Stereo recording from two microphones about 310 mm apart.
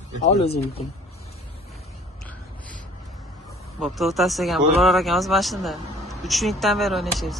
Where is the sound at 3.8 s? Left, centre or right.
Centre.